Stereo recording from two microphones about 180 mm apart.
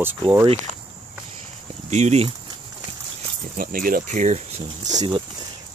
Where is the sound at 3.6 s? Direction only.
50° right (ahead or behind).